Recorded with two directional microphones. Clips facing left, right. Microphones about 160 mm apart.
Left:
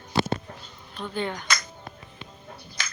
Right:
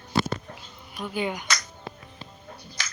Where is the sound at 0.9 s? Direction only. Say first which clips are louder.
Right 1 dB; 10° right (ahead or behind).